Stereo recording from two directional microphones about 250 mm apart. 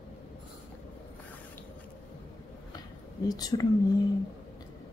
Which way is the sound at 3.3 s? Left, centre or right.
Centre.